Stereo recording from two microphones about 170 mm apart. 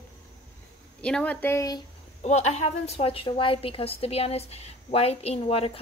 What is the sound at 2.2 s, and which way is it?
A woman's voice, 40° left (ahead or behind).